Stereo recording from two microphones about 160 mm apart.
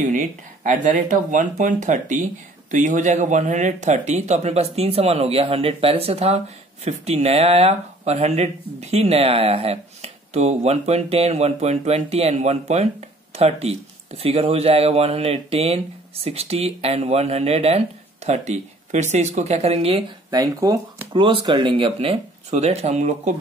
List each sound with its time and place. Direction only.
0.0 s speech: 55° right (ahead or behind)
20.2 s speech: 25° right (ahead or behind); by 23.3 s 45° right (ahead or behind)